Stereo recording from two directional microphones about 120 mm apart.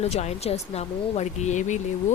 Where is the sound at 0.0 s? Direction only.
65° left (ahead or behind).